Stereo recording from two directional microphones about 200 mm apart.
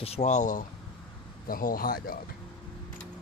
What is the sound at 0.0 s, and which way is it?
Speech, 35° left (ahead or behind).